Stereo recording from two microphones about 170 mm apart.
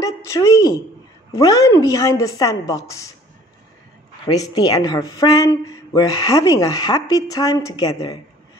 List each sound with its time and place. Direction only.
0.0 s a sound: 20° left (ahead or behind)
1.3 s speech: 20° left (ahead or behind)
4.3 s speech: 20° left (ahead or behind)